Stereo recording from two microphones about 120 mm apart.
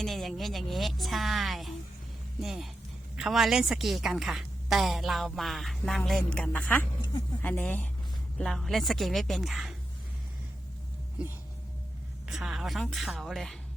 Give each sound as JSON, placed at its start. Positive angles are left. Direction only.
{"t": 0.0, "sound": "a woman's voice", "side_deg": 0}
{"t": 8.4, "sound": "a woman's voice", "side_deg": 0}
{"t": 12.3, "sound": "a woman's voice", "side_deg": -5}